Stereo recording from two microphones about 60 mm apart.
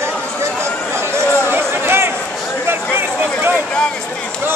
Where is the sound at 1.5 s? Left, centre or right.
Right.